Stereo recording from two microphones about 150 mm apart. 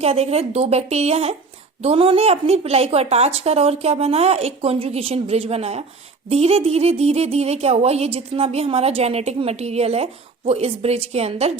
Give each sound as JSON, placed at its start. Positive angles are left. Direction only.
{"t": 0.0, "sound": "speech", "side_deg": -40}